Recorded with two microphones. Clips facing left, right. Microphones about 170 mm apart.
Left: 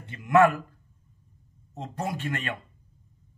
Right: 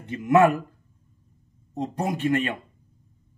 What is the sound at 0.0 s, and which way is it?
Speech, 20° right (ahead or behind).